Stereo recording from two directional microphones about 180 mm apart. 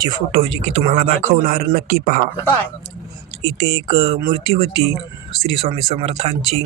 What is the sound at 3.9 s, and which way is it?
Speech, 35° right (ahead or behind).